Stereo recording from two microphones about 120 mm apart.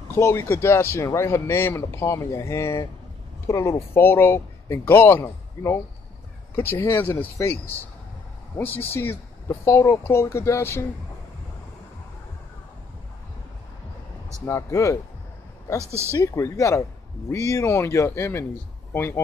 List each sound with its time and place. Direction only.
0.1 s speech: 20° left (ahead or behind)
14.4 s speech: 25° left (ahead or behind)
15.8 s speech: 20° right (ahead or behind)
16.3 s speech: 25° left (ahead or behind)